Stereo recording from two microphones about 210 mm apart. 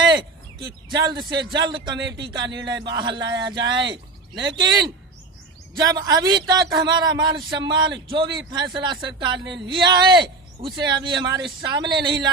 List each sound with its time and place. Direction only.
0.9 s speech: 20° right (ahead or behind)
2.4 s speech: 60° right (ahead or behind)
2.8 s speech: 20° right (ahead or behind)